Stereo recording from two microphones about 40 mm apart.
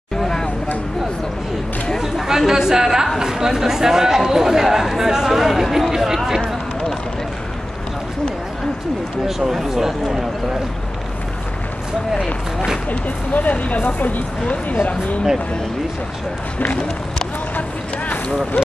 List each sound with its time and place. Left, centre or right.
2.2 s speech: centre
9.2 s speech: centre
12.9 s speech: left
17.6 s speech: left